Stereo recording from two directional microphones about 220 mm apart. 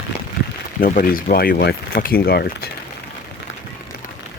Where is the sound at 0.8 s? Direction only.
40° left (ahead or behind).